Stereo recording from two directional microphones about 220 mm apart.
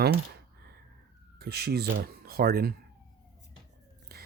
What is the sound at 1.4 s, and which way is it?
Speech, 45° right (ahead or behind).